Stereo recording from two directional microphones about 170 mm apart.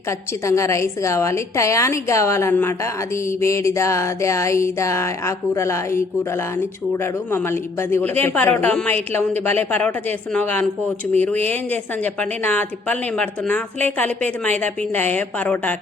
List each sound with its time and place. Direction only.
0.4 s a woman's voice: 15° left (ahead or behind)